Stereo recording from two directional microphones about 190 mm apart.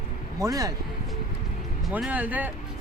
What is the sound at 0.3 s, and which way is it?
Speech, 20° right (ahead or behind).